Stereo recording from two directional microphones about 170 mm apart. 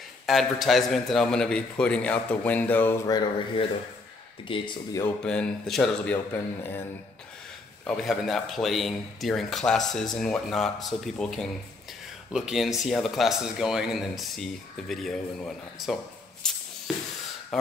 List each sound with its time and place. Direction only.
0.3 s a man's voice: centre (ahead or behind)
3.1 s speech: 25° left (ahead or behind)
5.0 s a man's voice: 5° left (ahead or behind)
7.8 s a man's voice: centre (ahead or behind)
16.4 s a sound: 5° left (ahead or behind)